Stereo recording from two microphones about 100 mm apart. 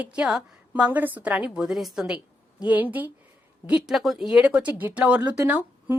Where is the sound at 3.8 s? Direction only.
Centre (ahead or behind).